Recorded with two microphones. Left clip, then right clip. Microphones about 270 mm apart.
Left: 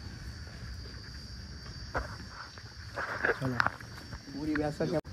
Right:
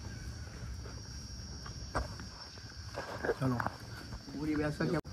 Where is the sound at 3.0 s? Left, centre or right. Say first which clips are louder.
Left 5 dB; right.